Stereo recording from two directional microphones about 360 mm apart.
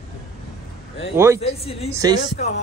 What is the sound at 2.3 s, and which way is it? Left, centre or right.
Speech, left.